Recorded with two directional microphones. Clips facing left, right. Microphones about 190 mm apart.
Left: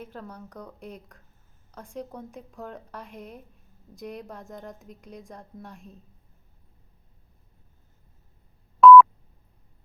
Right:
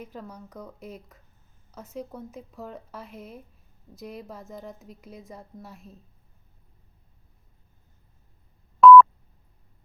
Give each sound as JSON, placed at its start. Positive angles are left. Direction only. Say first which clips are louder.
{"t": 0.0, "sound": "a woman's voice", "louder": "even", "side_deg": -10}
{"t": 8.8, "sound": "telephone dialing", "louder": "even", "side_deg": 0}